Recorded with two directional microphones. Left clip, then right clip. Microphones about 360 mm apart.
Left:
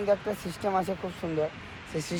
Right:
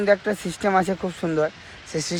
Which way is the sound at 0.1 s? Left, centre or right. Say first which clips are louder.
Right 6 dB; right.